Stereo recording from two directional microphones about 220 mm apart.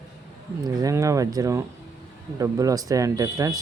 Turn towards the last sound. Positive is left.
turn(degrees=-15)  # may be behind; listen again after turning